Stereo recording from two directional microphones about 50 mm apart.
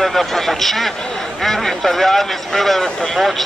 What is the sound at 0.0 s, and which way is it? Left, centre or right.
Speech, centre.